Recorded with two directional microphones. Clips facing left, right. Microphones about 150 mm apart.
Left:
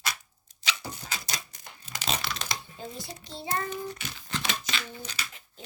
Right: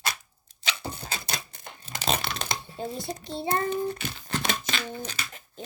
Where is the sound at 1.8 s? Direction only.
30° right (ahead or behind).